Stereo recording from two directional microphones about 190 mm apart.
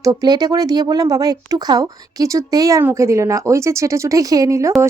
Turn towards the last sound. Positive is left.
turn(degrees=-15)  # may be behind; listen again after turning